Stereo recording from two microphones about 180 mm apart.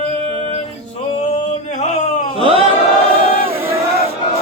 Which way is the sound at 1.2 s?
40° left (ahead or behind).